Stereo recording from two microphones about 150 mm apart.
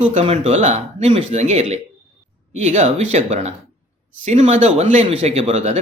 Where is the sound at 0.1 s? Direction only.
45° right (ahead or behind).